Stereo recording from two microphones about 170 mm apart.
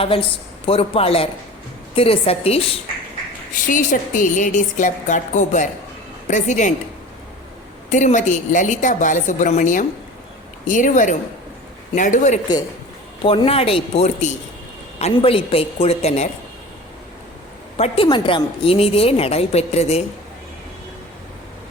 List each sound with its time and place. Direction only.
0.0 s a woman's voice: 30° left (ahead or behind)
3.5 s a woman's voice: 50° left (ahead or behind)
7.9 s a woman's voice: 45° left (ahead or behind)
13.2 s a woman's voice: 35° left (ahead or behind)
17.7 s a woman's voice: 35° left (ahead or behind)